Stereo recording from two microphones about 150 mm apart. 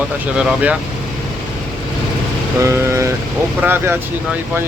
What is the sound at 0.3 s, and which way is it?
Speech, 5° right (ahead or behind).